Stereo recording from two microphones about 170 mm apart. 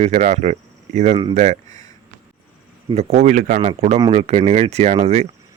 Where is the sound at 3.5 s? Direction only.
40° right (ahead or behind).